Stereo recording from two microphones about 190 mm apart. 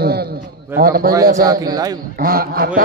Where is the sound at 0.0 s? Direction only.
55° right (ahead or behind).